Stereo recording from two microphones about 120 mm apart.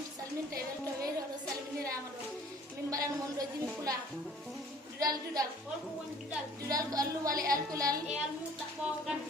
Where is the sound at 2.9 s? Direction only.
30° right (ahead or behind).